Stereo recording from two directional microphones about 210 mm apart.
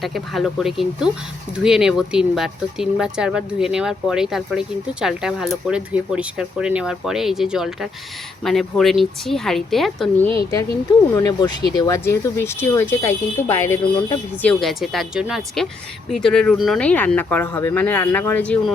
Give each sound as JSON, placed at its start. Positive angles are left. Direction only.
{"t": 0.0, "sound": "speech", "side_deg": 0}
{"t": 11.1, "sound": "speech", "side_deg": 15}